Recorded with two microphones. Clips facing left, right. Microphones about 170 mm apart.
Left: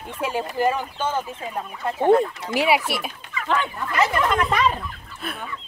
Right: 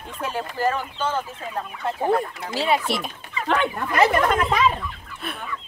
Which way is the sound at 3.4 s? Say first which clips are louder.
Right 2 dB; 60° right (ahead or behind).